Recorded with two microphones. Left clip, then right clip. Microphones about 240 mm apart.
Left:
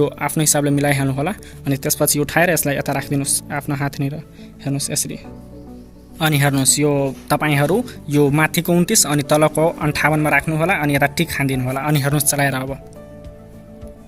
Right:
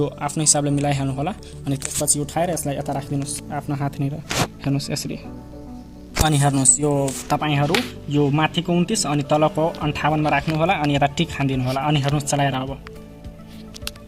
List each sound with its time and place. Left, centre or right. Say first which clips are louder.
0.0 s speech: left 4 dB; left
6.2 s speech: left 2 dB; centre
7.3 s speech: left 3 dB; left